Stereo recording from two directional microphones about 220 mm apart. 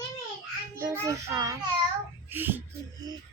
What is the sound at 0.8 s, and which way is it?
A child's voice, 10° right (ahead or behind).